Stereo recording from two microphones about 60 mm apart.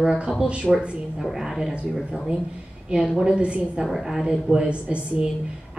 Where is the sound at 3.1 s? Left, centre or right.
Centre.